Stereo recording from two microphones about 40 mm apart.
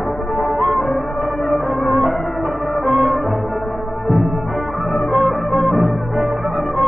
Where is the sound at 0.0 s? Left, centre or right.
Centre.